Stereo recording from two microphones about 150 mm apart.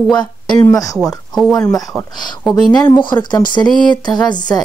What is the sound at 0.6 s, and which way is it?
Speech, 20° left (ahead or behind).